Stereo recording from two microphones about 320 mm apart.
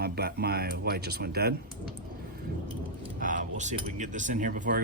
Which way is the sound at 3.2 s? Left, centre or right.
Right.